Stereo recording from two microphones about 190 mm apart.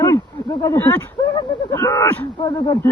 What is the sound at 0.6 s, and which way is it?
Speech, 15° left (ahead or behind).